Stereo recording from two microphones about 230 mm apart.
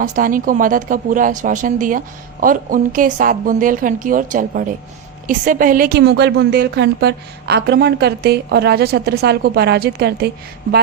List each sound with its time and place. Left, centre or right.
0.0 s a woman's voice: right